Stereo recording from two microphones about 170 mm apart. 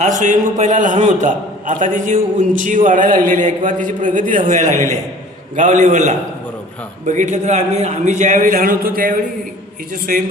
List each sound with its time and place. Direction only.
0.0 s a man's voice: 45° right (ahead or behind)
4.7 s a man's voice: 20° left (ahead or behind)
5.5 s a man's voice: 45° right (ahead or behind)